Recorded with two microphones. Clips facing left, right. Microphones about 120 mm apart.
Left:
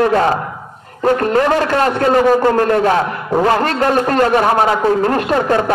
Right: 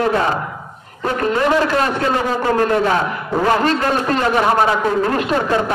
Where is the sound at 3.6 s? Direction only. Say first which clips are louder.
Left 2 dB; 45° left (ahead or behind).